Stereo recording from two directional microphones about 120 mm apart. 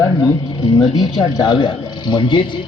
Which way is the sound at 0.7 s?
35° left (ahead or behind).